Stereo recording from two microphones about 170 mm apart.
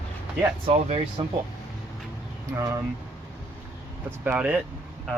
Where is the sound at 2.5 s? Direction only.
15° right (ahead or behind).